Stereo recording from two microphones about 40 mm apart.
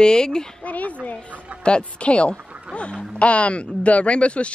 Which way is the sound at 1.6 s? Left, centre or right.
Left.